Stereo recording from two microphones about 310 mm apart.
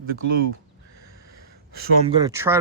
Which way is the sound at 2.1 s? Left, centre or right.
Centre.